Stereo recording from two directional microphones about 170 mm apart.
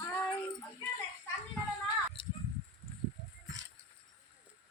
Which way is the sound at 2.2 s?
30° left (ahead or behind).